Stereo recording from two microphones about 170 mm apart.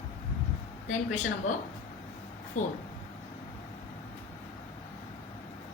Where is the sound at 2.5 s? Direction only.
50° left (ahead or behind).